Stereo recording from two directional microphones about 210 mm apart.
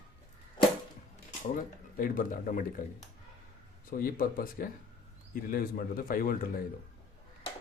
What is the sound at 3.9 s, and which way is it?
Speech, 45° left (ahead or behind).